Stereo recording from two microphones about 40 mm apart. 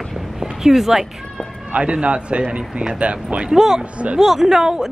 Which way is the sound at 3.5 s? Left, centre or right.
Centre.